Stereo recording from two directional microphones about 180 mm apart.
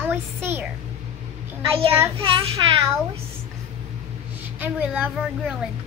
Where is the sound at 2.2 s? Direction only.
30° right (ahead or behind).